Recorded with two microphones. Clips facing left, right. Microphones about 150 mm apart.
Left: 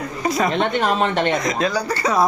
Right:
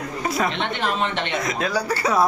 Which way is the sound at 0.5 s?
45° left (ahead or behind).